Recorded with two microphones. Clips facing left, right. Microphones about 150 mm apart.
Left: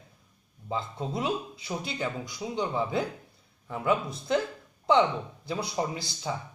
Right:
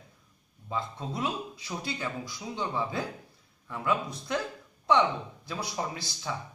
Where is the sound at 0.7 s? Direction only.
25° left (ahead or behind).